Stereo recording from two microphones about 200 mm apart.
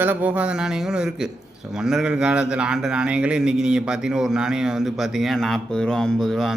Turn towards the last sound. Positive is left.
turn(degrees=0)  # may be behind; listen again after turning